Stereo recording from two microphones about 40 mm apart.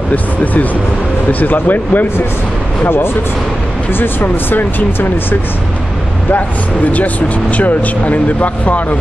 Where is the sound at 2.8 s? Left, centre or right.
Left.